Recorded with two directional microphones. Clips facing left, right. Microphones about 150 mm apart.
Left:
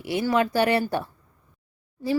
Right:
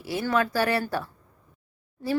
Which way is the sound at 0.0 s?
20° left (ahead or behind).